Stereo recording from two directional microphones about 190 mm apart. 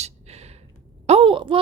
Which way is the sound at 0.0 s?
35° right (ahead or behind).